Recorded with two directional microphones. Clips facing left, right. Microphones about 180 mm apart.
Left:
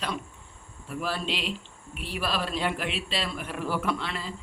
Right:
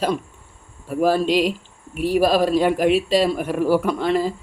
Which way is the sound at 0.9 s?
45° right (ahead or behind).